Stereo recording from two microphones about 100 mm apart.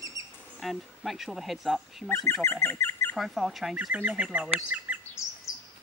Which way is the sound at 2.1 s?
25° left (ahead or behind).